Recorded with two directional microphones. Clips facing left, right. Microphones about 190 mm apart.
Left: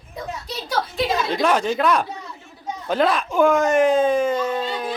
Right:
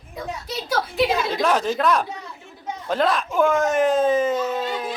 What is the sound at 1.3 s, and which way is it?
Speech, centre (ahead or behind).